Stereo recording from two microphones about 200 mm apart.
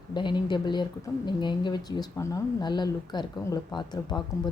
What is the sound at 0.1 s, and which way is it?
Speech, 25° left (ahead or behind).